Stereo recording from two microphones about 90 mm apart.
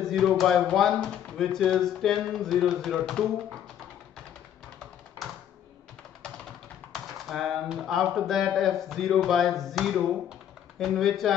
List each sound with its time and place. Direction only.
0.0 s speech: 5° left (ahead or behind)
6.9 s speech: centre (ahead or behind)